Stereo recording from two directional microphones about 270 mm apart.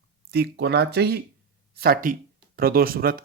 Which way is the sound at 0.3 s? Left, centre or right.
Right.